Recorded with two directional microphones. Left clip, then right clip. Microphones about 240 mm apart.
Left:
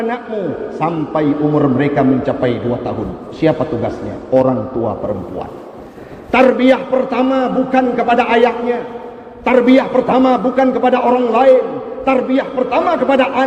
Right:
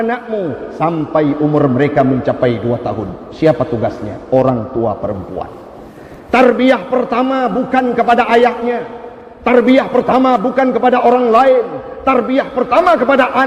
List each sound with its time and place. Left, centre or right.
0.8 s a man's voice: right
6.3 s a man's voice: right